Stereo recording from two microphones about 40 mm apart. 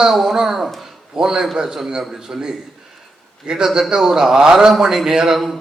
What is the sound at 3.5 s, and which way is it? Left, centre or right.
A man's voice, centre.